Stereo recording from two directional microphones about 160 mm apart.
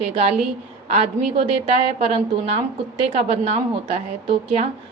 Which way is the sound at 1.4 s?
35° right (ahead or behind).